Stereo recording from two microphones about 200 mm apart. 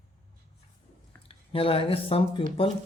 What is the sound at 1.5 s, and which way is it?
Speech, 30° left (ahead or behind).